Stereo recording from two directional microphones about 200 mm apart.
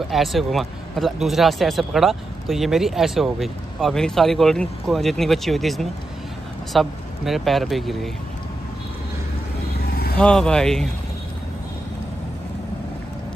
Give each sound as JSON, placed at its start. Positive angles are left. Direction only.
{"t": 0.1, "sound": "speech", "side_deg": 0}
{"t": 9.8, "sound": "a sound", "side_deg": 50}
{"t": 10.1, "sound": "speech", "side_deg": 5}